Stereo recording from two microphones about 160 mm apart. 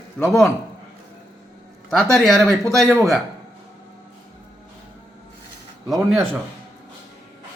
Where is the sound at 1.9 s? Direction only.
5° left (ahead or behind).